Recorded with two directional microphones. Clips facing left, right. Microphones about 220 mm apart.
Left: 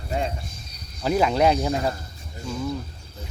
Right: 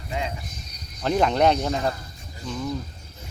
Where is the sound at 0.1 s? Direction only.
40° left (ahead or behind).